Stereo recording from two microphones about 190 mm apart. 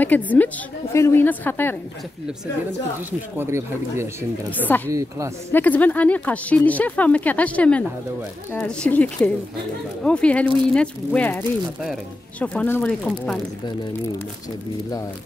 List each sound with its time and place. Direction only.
0.0 s speech: 10° left (ahead or behind)
3.3 s speech: 15° right (ahead or behind)
4.5 s speech: 10° left (ahead or behind)
4.8 s speech: 15° right (ahead or behind)
5.5 s speech: 10° left (ahead or behind)